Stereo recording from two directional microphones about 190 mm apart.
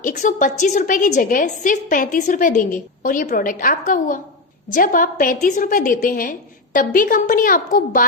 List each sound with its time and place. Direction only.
0.0 s a woman's voice: 40° left (ahead or behind)